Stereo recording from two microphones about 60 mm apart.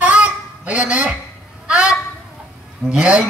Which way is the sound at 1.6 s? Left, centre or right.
Centre.